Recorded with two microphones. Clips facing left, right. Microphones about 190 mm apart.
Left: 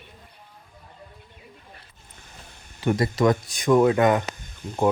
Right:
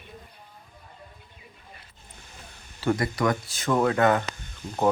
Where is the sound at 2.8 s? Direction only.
20° left (ahead or behind).